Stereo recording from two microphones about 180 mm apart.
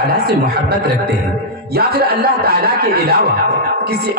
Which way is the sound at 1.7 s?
60° right (ahead or behind).